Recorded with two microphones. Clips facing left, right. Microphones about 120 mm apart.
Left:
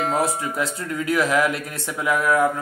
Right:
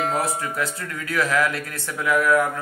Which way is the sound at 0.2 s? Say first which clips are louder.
Left 2 dB; 20° left (ahead or behind).